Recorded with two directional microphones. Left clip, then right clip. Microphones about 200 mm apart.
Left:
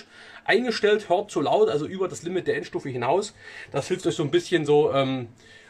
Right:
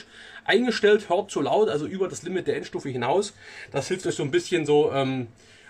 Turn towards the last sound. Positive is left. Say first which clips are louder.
# left 1 dB
turn(degrees=10)  # may be behind; listen again after turning